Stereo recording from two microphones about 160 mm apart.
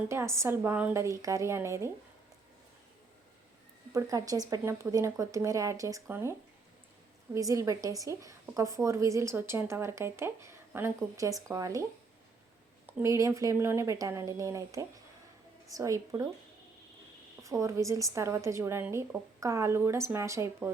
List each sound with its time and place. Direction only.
0.1 s a woman's voice: 15° right (ahead or behind)
3.9 s speech: 20° right (ahead or behind)
7.3 s speech: 20° right (ahead or behind)
17.4 s a woman's voice: 20° right (ahead or behind)